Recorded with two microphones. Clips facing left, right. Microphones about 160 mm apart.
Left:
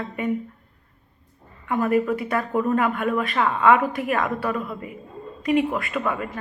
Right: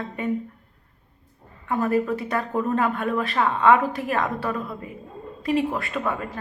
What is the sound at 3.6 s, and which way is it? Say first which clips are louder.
Speech: even; 30° right (ahead or behind).